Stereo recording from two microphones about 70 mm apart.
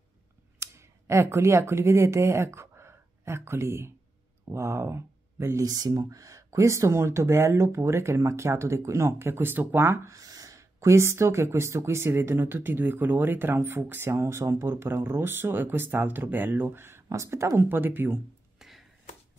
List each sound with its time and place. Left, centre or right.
0.6 s speech: right
5.6 s speech: right
10.0 s speech: right
17.1 s speech: right
17.6 s speech: right
18.6 s a sound: centre